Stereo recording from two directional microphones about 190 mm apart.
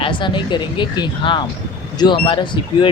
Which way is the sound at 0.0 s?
25° left (ahead or behind).